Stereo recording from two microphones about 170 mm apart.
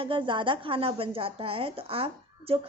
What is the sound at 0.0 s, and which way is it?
Speech, 30° right (ahead or behind).